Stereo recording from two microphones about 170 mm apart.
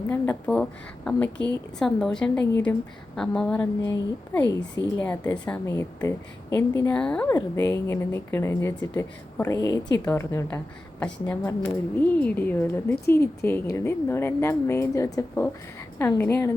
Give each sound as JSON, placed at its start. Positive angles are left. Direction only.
{"t": 0.1, "sound": "a woman's voice", "side_deg": 10}
{"t": 3.9, "sound": "a woman's voice", "side_deg": 20}